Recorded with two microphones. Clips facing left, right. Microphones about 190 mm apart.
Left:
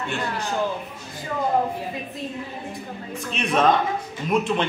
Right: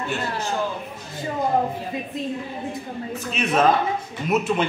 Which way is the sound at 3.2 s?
5° right (ahead or behind).